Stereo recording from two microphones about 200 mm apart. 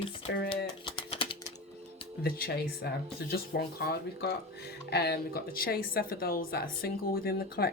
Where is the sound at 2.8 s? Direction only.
55° left (ahead or behind).